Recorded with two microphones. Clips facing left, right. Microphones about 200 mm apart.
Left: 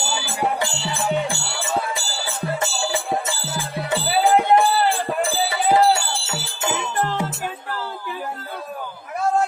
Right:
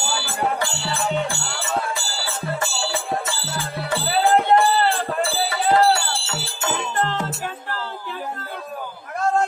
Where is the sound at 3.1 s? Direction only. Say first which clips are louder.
Left 1 dB; 20° left (ahead or behind).